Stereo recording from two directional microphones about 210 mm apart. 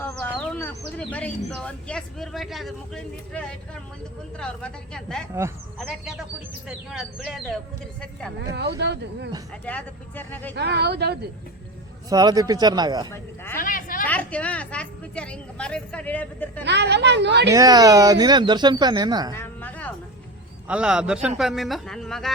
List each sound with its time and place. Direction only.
0.0 s a sound: 10° left (ahead or behind)
0.9 s speech: 5° left (ahead or behind)
6.7 s speech: centre (ahead or behind)
8.4 s speech: 50° right (ahead or behind)
9.6 s a woman's voice: 10° left (ahead or behind)
10.5 s speech: 55° right (ahead or behind)
12.0 s speech: 20° right (ahead or behind)
13.1 s a woman's voice: 10° left (ahead or behind)
13.6 s a sound: 40° left (ahead or behind)
14.1 s a woman's voice: 5° left (ahead or behind)
16.6 s a woman's voice: 55° right (ahead or behind)
17.5 s speech: 15° right (ahead or behind)
19.3 s a sound: 10° left (ahead or behind)
20.7 s speech: 5° right (ahead or behind)